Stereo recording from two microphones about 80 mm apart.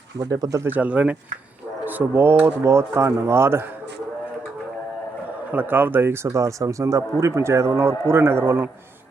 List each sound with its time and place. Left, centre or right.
0.2 s speech: right
0.6 s speech: right
5.5 s speech: right